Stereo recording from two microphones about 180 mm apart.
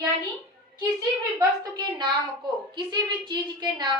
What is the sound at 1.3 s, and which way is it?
A woman's voice, 20° right (ahead or behind).